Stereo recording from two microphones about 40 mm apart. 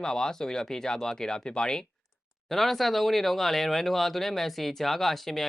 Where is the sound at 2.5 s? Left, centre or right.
Centre.